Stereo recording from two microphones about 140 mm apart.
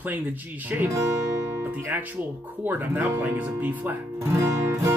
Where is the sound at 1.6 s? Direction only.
10° right (ahead or behind).